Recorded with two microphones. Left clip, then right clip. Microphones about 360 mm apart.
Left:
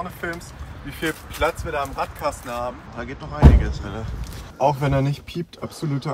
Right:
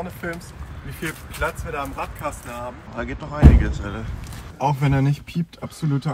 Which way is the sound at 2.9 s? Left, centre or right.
Centre.